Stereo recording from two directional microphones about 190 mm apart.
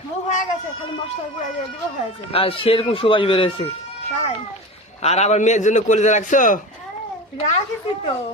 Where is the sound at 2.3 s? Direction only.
30° left (ahead or behind).